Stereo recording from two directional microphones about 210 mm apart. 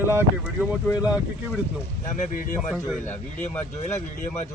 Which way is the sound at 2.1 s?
40° left (ahead or behind).